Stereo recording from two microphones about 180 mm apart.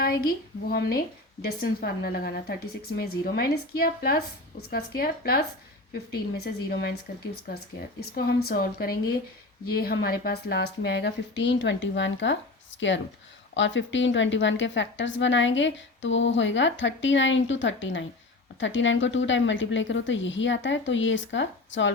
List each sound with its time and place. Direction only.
0.0 s a woman's voice: 55° left (ahead or behind)
8.1 s a woman's voice: 60° left (ahead or behind); by 12.4 s 90° left
13.5 s a woman's voice: 90° left